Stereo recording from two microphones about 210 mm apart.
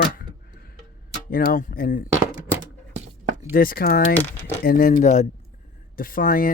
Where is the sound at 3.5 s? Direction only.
45° left (ahead or behind).